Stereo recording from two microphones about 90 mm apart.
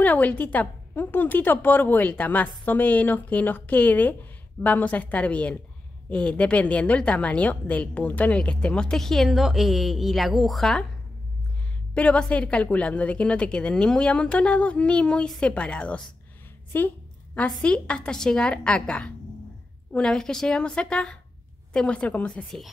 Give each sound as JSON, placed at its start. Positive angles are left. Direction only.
{"t": 0.0, "sound": "a woman's voice", "side_deg": 15}
{"t": 11.9, "sound": "a woman's voice", "side_deg": 15}